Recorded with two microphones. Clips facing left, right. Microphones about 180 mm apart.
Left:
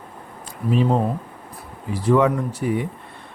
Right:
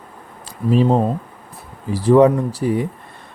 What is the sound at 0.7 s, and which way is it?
Speech, 35° right (ahead or behind).